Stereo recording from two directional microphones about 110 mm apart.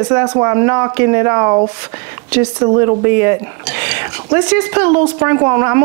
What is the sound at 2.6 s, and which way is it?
A woman's voice, 30° right (ahead or behind).